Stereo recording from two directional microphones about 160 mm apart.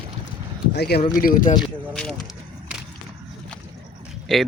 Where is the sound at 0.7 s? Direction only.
90° left.